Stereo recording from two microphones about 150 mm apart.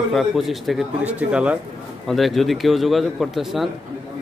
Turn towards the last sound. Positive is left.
turn(degrees=0)  # may be behind; listen again after turning